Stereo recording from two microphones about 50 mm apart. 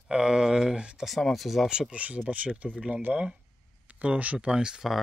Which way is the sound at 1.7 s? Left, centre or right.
Centre.